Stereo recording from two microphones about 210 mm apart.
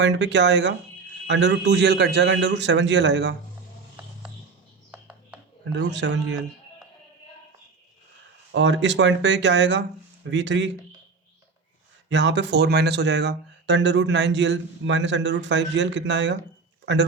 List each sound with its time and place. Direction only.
0.0 s speech: 55° right (ahead or behind)
4.9 s music: 5° right (ahead or behind)
5.7 s speech: 55° right (ahead or behind)
8.5 s speech: 60° right (ahead or behind)
12.0 s speech: 60° right (ahead or behind)